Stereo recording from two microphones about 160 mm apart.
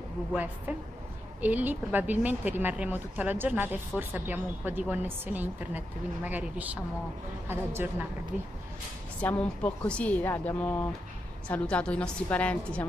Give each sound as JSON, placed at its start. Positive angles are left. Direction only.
{"t": 0.7, "sound": "speech", "side_deg": -10}
{"t": 9.2, "sound": "speech", "side_deg": 10}